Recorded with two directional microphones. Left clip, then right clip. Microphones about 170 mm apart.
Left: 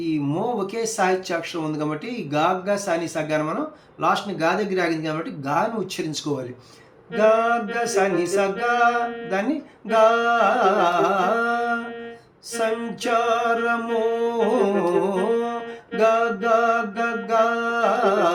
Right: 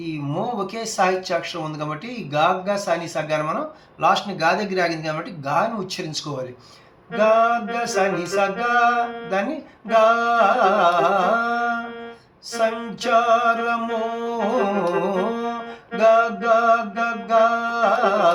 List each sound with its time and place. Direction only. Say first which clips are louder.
0.0 s music: left 2 dB; 20° left (ahead or behind)
4.0 s speech: right 3 dB; 15° left (ahead or behind)
7.1 s music: right 1 dB; 20° left (ahead or behind)